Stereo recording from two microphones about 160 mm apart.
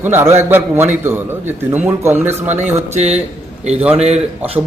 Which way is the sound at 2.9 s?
45° right (ahead or behind).